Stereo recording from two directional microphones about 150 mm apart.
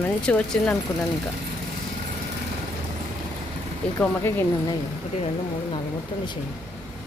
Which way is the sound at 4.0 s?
15° left (ahead or behind).